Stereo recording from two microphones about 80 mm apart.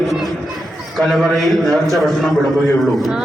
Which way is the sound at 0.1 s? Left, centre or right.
Centre.